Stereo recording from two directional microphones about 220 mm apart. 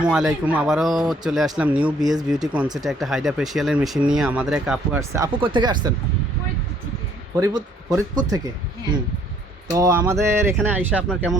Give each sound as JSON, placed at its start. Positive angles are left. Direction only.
{"t": 0.0, "sound": "speech", "side_deg": -5}
{"t": 4.9, "sound": "speech", "side_deg": -15}
{"t": 7.3, "sound": "speech", "side_deg": -15}
{"t": 9.7, "sound": "speech", "side_deg": -15}